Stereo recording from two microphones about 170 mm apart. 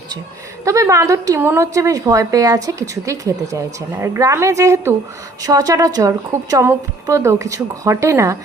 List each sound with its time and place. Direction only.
0.6 s a woman's voice: 20° right (ahead or behind)